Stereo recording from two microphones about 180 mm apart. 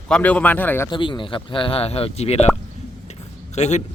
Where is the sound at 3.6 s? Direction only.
40° left (ahead or behind).